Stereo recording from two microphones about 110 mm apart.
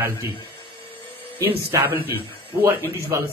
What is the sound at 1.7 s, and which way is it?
Speech, 20° right (ahead or behind).